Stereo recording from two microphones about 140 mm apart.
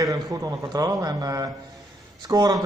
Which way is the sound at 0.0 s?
25° right (ahead or behind).